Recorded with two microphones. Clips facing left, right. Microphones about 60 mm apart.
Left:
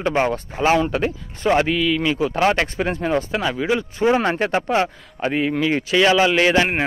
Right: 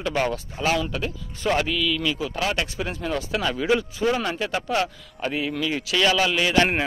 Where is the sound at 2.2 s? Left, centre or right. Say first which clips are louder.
Left 8 dB; left.